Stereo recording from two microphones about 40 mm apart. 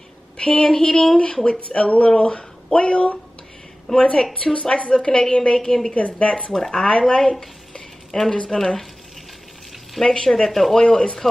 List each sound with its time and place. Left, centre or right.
0.4 s a woman's voice: left
3.9 s speech: left
4.6 s speech: left
5.6 s speech: centre
5.9 s a woman's voice: left
6.5 s speech: centre
6.9 s a sound: left
8.3 s speech: centre
10.0 s speech: left
10.3 s speech: centre
10.8 s speech: left